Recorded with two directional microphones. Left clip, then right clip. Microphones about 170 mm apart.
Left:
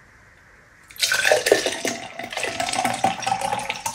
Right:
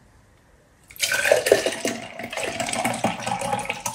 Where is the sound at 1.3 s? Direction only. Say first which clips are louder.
Right 3 dB; 15° left (ahead or behind).